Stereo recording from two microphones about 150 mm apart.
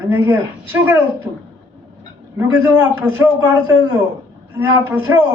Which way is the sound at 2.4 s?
15° right (ahead or behind).